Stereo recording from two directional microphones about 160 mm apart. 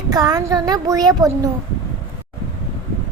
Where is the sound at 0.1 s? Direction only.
25° right (ahead or behind).